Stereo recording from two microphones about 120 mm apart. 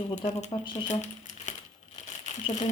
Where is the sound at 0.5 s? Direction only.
45° left (ahead or behind).